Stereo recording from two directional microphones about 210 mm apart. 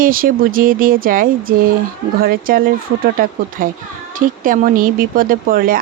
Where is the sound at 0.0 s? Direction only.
40° right (ahead or behind).